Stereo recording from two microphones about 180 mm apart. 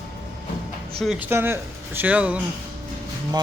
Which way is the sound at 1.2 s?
15° right (ahead or behind).